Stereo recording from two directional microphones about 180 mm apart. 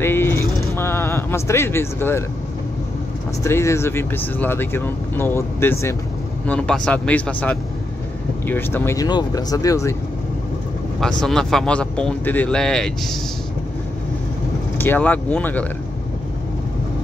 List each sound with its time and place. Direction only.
0.0 s a sound: 15° left (ahead or behind)
3.4 s speech: 15° left (ahead or behind)
11.0 s speech: centre (ahead or behind)
14.8 s speech: 10° left (ahead or behind)